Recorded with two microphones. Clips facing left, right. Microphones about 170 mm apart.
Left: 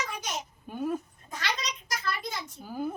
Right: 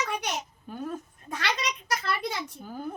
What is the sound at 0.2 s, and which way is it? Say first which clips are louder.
Speech: right 3 dB; 65° right (ahead or behind).